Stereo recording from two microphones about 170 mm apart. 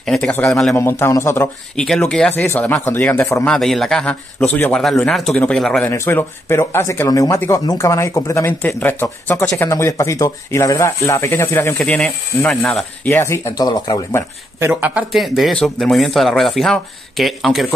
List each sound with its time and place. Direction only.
0.0 s speech: 5° left (ahead or behind)
0.7 s speech: 15° left (ahead or behind)
3.4 s speech: centre (ahead or behind)
5.9 s speech: 15° left (ahead or behind)
14.6 s speech: 10° right (ahead or behind)